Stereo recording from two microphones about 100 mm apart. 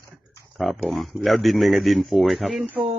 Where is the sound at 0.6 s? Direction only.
Centre (ahead or behind).